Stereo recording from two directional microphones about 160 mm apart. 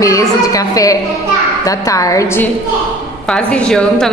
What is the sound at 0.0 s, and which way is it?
A woman's voice, 20° left (ahead or behind).